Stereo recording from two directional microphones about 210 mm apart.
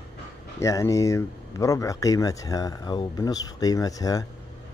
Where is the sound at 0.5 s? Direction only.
15° left (ahead or behind).